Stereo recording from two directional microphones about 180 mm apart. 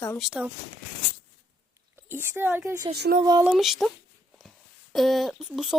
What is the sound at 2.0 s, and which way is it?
Speech, 10° right (ahead or behind).